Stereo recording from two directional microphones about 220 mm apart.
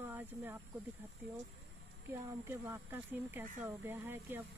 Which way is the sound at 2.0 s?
10° right (ahead or behind).